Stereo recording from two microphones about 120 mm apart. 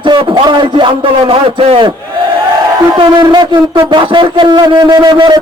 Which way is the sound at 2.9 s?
40° right (ahead or behind).